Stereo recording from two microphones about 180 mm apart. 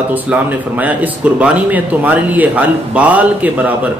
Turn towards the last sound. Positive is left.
turn(degrees=-10)  # may be behind; listen again after turning